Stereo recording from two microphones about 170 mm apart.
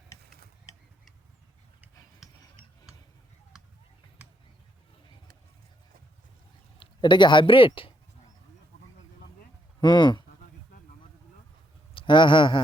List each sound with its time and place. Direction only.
2.2 s a sound: centre (ahead or behind)
6.7 s speech: 25° left (ahead or behind)
9.8 s speech: 25° left (ahead or behind)
11.9 s a man's voice: 30° left (ahead or behind)